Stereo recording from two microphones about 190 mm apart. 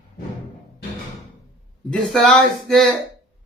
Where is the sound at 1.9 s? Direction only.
Centre (ahead or behind).